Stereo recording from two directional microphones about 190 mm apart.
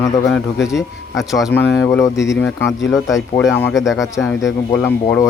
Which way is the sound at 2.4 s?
5° left (ahead or behind).